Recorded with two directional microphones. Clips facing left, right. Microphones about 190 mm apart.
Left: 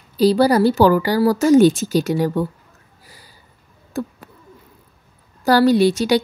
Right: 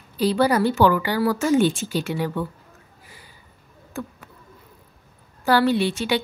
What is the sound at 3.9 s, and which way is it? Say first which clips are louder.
Speech: left 6 dB; 35° left (ahead or behind).